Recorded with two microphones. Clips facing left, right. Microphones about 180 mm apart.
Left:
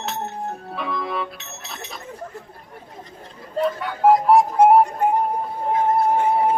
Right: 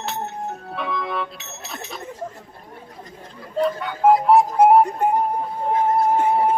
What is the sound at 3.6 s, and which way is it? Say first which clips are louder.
Music: even; centre (ahead or behind).